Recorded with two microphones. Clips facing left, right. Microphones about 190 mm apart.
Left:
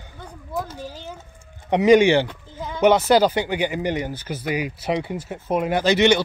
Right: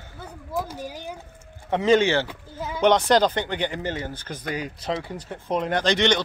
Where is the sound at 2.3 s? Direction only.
5° right (ahead or behind).